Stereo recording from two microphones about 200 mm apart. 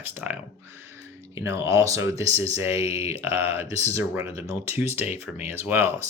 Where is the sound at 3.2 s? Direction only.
15° right (ahead or behind).